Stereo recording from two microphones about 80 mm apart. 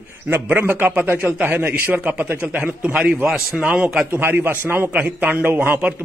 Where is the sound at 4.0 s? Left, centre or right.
Right.